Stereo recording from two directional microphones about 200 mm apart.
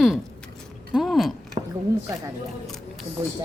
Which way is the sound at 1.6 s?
25° right (ahead or behind).